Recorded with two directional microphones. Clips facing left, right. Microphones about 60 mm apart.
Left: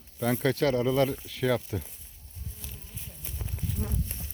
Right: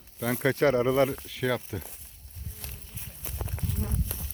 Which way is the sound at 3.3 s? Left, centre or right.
Right.